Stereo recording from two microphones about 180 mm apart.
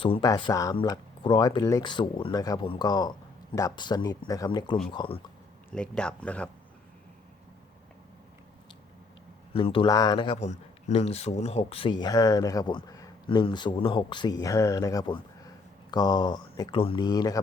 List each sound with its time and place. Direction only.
0.0 s speech: 25° left (ahead or behind)
5.7 s speech: 5° left (ahead or behind)
9.5 s speech: 30° left (ahead or behind)
10.4 s speech: 40° left (ahead or behind); by 17.4 s 20° left (ahead or behind)